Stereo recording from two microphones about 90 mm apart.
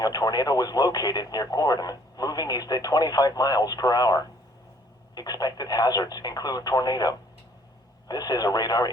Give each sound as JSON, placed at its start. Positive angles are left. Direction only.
{"t": 0.0, "sound": "speech", "side_deg": 45}